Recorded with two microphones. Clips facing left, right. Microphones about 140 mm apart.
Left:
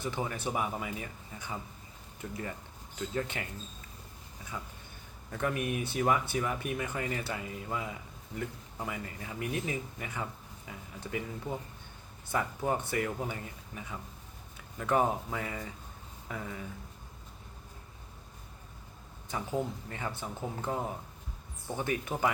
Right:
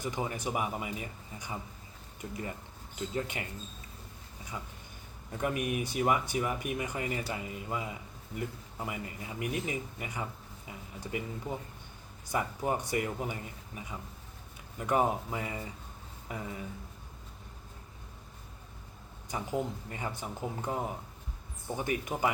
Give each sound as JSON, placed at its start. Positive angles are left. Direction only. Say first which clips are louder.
{"t": 0.0, "sound": "speech", "louder": "even", "side_deg": -15}
{"t": 2.2, "sound": "speech", "louder": "even", "side_deg": -25}
{"t": 3.2, "sound": "speech", "louder": "left 1 dB", "side_deg": -15}
{"t": 5.3, "sound": "speech", "louder": "even", "side_deg": -20}
{"t": 19.3, "sound": "speech", "louder": "even", "side_deg": -15}